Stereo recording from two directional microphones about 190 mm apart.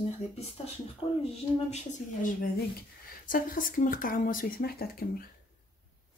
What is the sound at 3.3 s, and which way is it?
Speech, 45° left (ahead or behind).